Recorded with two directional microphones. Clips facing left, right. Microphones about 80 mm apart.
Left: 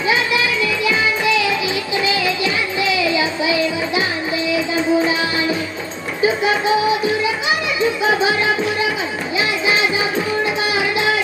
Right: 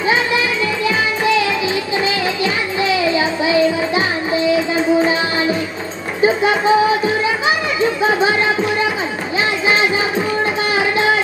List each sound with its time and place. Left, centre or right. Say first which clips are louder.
0.0 s music: right 2 dB; right
6.2 s music: right 3 dB; right
10.4 s music: right 2 dB; right